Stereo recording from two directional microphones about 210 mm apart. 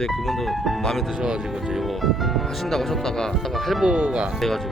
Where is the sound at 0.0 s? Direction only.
Centre (ahead or behind).